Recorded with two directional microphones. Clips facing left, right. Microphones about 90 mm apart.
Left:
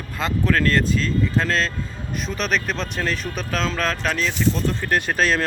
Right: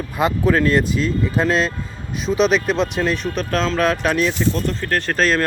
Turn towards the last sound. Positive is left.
turn(degrees=5)  # may be behind; listen again after turning